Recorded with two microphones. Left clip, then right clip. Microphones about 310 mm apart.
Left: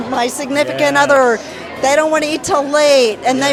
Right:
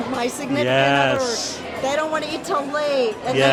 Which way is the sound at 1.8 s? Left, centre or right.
Left.